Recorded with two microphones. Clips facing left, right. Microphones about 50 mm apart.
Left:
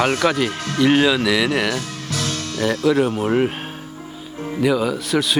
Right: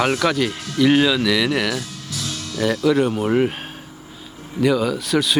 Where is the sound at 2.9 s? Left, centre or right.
Centre.